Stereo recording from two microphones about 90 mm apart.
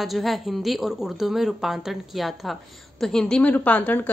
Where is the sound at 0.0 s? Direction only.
Centre (ahead or behind).